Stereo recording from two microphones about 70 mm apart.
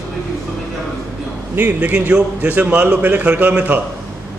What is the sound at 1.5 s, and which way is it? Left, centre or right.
A man's voice, right.